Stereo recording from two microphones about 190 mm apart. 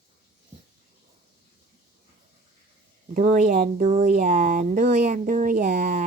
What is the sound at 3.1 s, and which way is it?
Speech, 45° right (ahead or behind).